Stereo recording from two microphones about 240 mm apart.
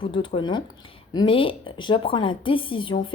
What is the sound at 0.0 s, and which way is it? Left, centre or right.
A woman's voice, left.